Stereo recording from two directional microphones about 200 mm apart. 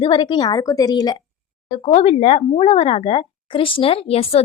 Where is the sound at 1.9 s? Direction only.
30° left (ahead or behind).